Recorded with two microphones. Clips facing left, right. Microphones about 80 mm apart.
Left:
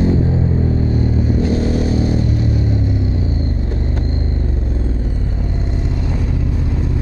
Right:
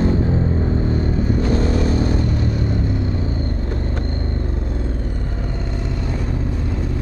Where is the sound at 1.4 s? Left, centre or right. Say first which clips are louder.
Left 2 dB; right.